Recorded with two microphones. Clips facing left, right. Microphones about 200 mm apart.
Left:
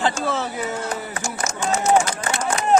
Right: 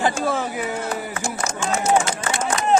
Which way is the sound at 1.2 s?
35° right (ahead or behind).